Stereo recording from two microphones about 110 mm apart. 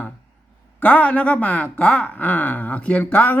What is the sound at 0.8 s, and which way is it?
Speech, 15° left (ahead or behind).